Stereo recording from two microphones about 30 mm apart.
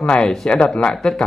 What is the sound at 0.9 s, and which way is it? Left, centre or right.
Speech, left.